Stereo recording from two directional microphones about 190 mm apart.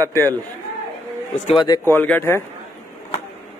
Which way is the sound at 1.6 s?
20° left (ahead or behind).